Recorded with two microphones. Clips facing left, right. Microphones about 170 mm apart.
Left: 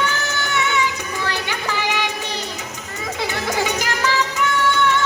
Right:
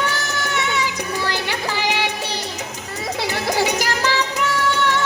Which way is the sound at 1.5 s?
35° right (ahead or behind).